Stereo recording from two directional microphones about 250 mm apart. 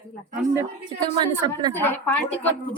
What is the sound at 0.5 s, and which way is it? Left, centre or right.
Speech, centre.